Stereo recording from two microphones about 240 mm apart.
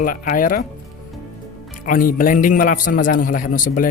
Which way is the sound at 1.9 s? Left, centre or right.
Left.